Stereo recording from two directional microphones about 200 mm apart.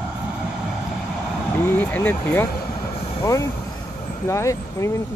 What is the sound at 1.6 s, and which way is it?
Speech, 10° left (ahead or behind).